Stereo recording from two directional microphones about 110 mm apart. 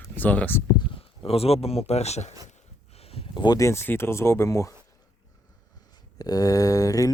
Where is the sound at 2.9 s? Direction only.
65° left (ahead or behind).